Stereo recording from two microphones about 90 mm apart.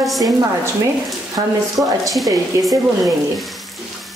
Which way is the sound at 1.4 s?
60° right (ahead or behind).